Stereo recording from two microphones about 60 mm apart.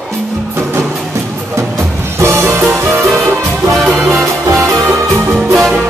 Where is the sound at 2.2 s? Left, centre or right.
Right.